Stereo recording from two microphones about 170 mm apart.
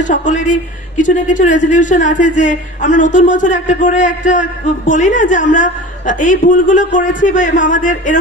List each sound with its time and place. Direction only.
0.0 s a man's voice: 50° left (ahead or behind)